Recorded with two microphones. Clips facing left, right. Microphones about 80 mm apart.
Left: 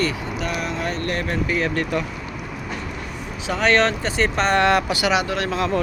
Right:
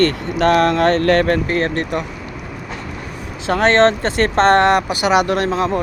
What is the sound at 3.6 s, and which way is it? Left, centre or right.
Speech, right.